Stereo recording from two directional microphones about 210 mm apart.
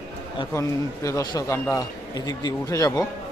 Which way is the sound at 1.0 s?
15° left (ahead or behind).